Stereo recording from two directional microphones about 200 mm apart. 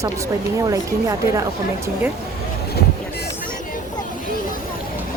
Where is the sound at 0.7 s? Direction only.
15° right (ahead or behind).